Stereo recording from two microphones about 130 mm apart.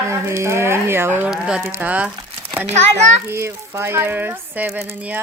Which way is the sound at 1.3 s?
5° right (ahead or behind).